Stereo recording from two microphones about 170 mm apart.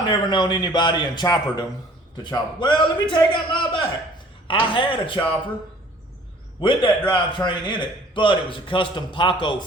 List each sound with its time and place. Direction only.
0.1 s a man's voice: 25° left (ahead or behind)
6.6 s a man's voice: 30° left (ahead or behind)